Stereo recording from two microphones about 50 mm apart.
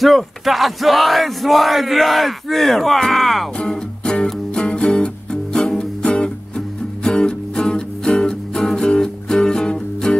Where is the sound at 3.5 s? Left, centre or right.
Centre.